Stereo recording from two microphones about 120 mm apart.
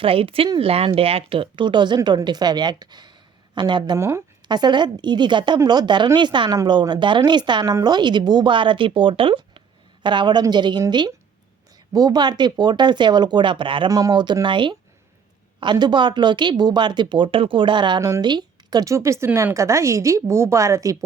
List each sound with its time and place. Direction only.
0.0 s a woman's voice: 50° right (ahead or behind)
3.9 s speech: 25° right (ahead or behind)
4.4 s speech: 35° right (ahead or behind)
13.9 s speech: 35° right (ahead or behind)